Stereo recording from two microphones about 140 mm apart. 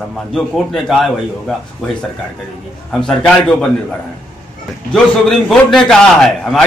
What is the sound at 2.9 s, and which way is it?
Speech, 5° left (ahead or behind).